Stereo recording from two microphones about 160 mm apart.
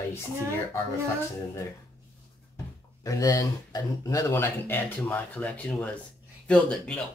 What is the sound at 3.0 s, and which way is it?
Speech, 20° left (ahead or behind).